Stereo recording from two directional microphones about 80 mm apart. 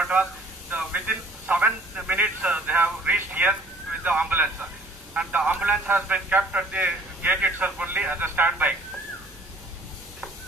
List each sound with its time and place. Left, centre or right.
0.0 s a man's voice: centre